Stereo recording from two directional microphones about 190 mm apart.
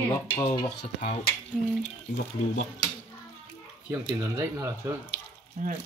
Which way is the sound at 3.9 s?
15° right (ahead or behind).